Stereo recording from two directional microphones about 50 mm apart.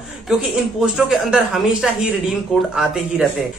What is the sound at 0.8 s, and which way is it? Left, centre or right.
Speech, centre.